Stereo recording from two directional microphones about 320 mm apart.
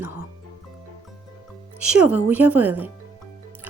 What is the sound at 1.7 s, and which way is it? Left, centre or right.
Speech, centre.